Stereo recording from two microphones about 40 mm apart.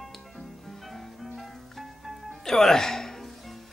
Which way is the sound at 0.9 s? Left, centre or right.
Centre.